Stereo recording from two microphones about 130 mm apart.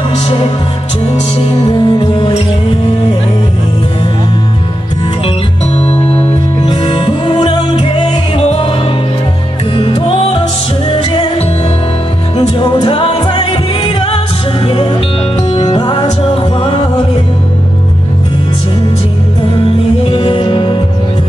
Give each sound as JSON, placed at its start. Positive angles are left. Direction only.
{"t": 1.7, "sound": "music", "side_deg": 40}
{"t": 5.8, "sound": "music", "side_deg": 55}
{"t": 6.7, "sound": "music", "side_deg": 40}
{"t": 9.8, "sound": "music", "side_deg": 45}
{"t": 15.5, "sound": "music", "side_deg": 35}
{"t": 20.1, "sound": "music", "side_deg": 45}